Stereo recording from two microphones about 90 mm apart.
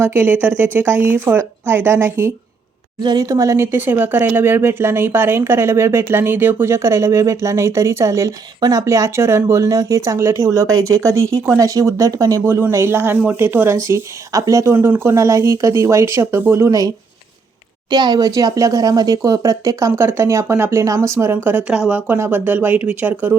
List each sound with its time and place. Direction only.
0.0 s speech: 25° right (ahead or behind)
3.0 s speech: 55° right (ahead or behind)
3.2 s speech: 35° right (ahead or behind)
3.7 s speech: 20° right (ahead or behind)
17.8 s speech: 50° right (ahead or behind); by 21.6 s 25° right (ahead or behind)
21.7 s speech: 10° right (ahead or behind)